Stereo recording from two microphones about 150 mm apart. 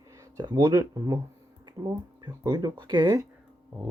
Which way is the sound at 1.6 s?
25° right (ahead or behind).